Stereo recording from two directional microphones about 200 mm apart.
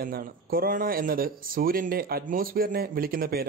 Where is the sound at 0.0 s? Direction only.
45° right (ahead or behind).